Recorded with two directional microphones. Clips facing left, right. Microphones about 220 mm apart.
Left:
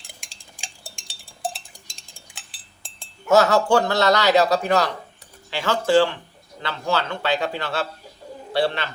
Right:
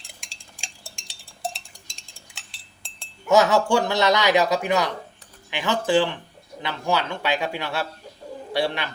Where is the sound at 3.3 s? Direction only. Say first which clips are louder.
Left 1 dB; 15° right (ahead or behind).